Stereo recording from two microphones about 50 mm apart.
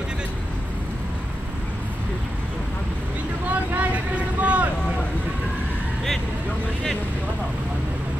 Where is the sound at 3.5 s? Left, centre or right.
Right.